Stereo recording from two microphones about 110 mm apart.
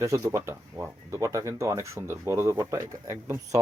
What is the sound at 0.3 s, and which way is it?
Speech, 25° right (ahead or behind).